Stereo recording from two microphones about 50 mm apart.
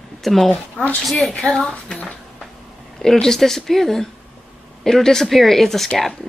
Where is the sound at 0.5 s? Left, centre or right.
Left.